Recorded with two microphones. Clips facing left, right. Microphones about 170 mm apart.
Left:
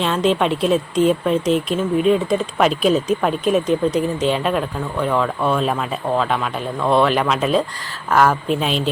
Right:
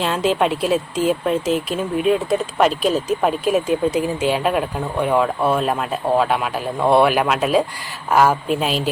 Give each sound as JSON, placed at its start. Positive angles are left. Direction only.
{"t": 0.0, "sound": "speech", "side_deg": -5}